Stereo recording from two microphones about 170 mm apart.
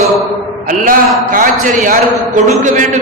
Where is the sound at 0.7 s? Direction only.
55° right (ahead or behind).